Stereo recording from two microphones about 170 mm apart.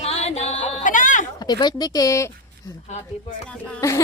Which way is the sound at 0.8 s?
50° left (ahead or behind).